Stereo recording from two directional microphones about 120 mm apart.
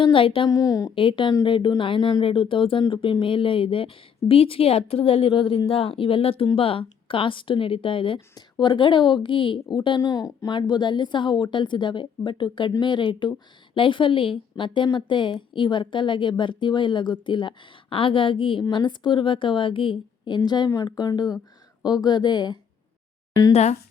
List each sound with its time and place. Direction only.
0.0 s speech: 45° left (ahead or behind)
0.5 s a woman's voice: 30° left (ahead or behind)
0.9 s a woman's voice: 45° left (ahead or behind)
23.5 s speech: 65° left (ahead or behind)